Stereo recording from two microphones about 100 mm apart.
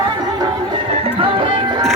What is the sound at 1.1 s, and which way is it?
Music, 65° right (ahead or behind).